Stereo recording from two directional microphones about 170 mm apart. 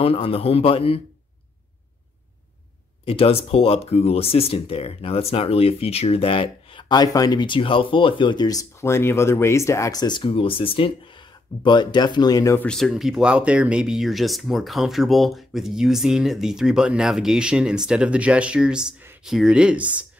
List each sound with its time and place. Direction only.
0.0 s speech: 35° left (ahead or behind)
3.1 s speech: 35° left (ahead or behind)
12.5 s speech: 5° left (ahead or behind)